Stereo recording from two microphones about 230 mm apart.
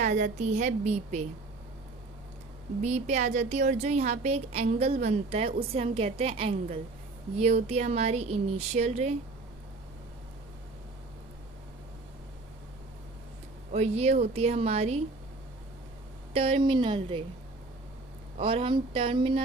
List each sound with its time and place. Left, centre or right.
0.0 s a woman's voice: right
2.8 s a woman's voice: right
13.7 s a woman's voice: right
16.3 s a woman's voice: right
18.3 s a woman's voice: right